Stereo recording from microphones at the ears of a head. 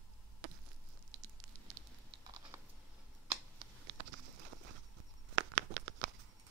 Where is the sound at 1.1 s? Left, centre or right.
Right.